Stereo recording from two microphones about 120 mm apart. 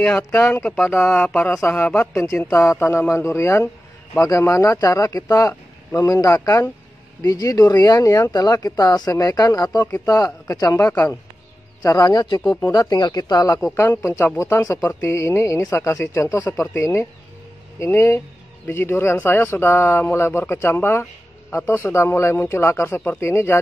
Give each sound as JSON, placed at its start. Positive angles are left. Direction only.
{"t": 0.3, "sound": "a man's voice", "side_deg": 15}
{"t": 10.9, "sound": "a man's voice", "side_deg": 15}
{"t": 11.8, "sound": "speech", "side_deg": 30}